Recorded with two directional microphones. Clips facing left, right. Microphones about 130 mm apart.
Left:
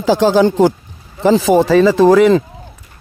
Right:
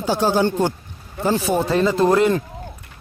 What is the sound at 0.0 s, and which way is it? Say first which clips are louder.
Speech: left 7 dB; 90° left.